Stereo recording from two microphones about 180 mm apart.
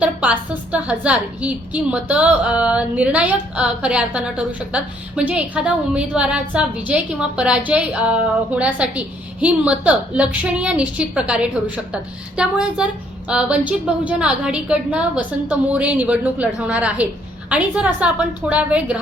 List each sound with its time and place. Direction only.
0.0 s a woman's voice: 10° right (ahead or behind)